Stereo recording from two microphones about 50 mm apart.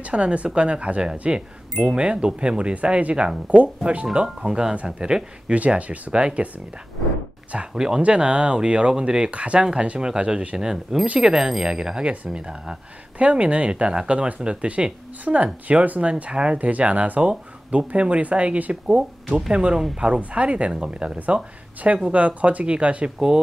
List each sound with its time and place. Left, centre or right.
0.0 s speech: right
7.5 s speech: centre